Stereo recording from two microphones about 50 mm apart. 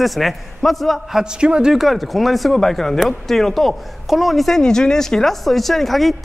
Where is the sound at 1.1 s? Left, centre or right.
Centre.